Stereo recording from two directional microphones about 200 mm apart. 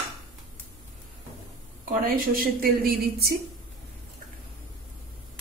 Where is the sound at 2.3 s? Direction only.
45° right (ahead or behind).